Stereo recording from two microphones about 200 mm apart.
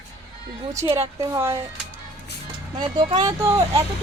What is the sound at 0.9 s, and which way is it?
Speech, 15° right (ahead or behind).